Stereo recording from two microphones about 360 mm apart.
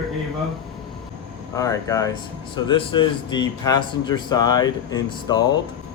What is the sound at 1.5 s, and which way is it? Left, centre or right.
A man's voice, centre.